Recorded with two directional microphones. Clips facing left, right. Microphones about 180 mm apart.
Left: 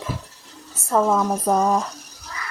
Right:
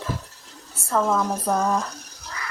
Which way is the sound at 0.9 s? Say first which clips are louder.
Left 3 dB; 15° left (ahead or behind).